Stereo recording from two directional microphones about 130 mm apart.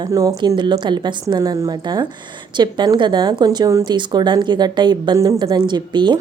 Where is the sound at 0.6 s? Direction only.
35° right (ahead or behind).